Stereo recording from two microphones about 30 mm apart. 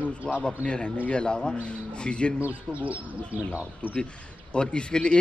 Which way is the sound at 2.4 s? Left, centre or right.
Right.